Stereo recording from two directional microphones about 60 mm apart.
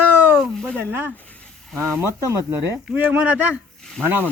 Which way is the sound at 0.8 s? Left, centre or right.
Right.